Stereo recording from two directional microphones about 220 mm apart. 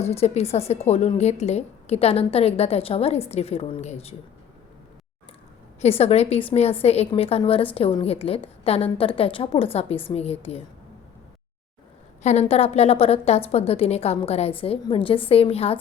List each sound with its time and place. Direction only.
0.0 s a woman's voice: 30° left (ahead or behind)
5.8 s a woman's voice: 30° left (ahead or behind)
12.2 s a woman's voice: 30° left (ahead or behind)